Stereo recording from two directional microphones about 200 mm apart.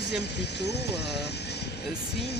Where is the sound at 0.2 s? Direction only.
55° left (ahead or behind).